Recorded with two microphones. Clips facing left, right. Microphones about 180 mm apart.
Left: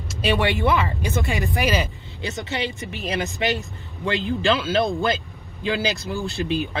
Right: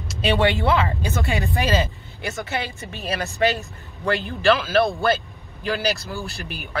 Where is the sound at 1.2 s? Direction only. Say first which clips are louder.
Right 1 dB; 20° left (ahead or behind).